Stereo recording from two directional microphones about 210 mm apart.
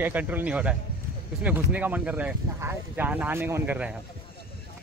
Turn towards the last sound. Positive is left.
turn(degrees=-5)  # may be behind; listen again after turning